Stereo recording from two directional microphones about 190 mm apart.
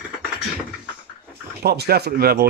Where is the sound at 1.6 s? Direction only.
55° right (ahead or behind).